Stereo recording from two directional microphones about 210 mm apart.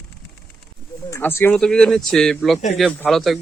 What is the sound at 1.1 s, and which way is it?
Speech, 10° left (ahead or behind).